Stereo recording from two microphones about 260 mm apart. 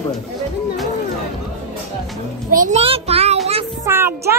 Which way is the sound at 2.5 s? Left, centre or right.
Right.